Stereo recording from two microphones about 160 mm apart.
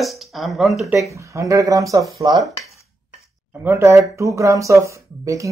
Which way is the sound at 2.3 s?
Centre (ahead or behind).